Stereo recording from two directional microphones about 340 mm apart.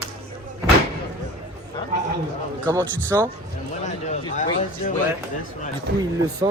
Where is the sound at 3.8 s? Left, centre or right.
Left.